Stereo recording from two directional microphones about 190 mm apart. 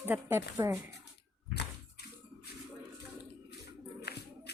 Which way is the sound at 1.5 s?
60° left (ahead or behind).